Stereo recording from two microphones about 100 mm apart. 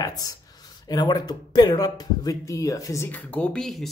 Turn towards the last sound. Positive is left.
turn(degrees=5)  # may be behind; listen again after turning